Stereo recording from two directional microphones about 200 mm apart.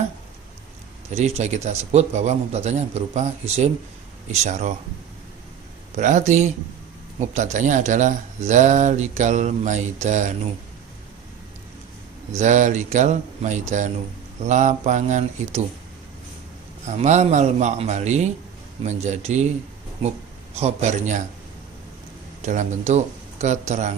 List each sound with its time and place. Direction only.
1.1 s speech: 30° right (ahead or behind)
6.0 s speech: 35° right (ahead or behind)
12.4 s speech: 35° right (ahead or behind)
16.8 s speech: 35° right (ahead or behind)
20.6 s speech: 35° right (ahead or behind)
22.4 s speech: 35° right (ahead or behind)